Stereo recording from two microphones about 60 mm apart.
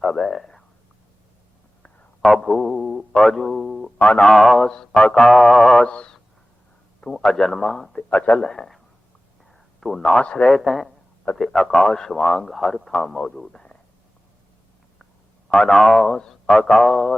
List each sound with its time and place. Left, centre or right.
0.0 s speech: centre
1.8 s a sound: centre
3.2 s a man's voice: centre
5.8 s a man's voice: centre
8.1 s speech: left
8.4 s a man's voice: centre
9.5 s a sound: centre
10.2 s a man's voice: centre
10.6 s a man's voice: centre
12.9 s a man's voice: centre
15.5 s a man's voice: centre